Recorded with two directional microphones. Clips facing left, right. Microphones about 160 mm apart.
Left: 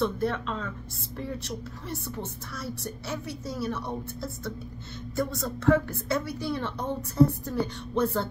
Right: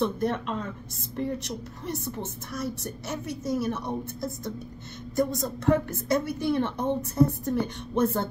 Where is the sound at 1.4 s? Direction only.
20° right (ahead or behind).